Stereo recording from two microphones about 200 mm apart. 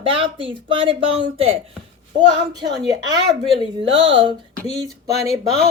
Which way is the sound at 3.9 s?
65° right (ahead or behind).